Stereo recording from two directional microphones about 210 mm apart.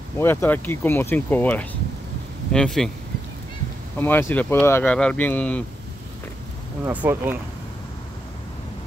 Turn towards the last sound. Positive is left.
turn(degrees=-10)  # may be behind; listen again after turning